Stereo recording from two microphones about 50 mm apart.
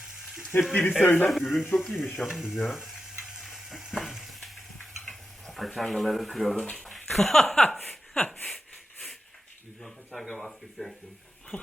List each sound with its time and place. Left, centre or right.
0.2 s sizzle: centre
0.7 s speech: left
1.3 s speech: centre
1.7 s speech: centre
2.2 s stir: centre
6.7 s speech: centre
10.2 s speech: centre